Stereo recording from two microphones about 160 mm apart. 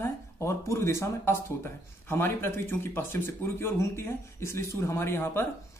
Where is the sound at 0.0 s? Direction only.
15° left (ahead or behind).